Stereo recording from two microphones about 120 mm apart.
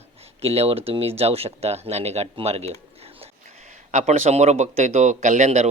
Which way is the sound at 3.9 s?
75° right (ahead or behind).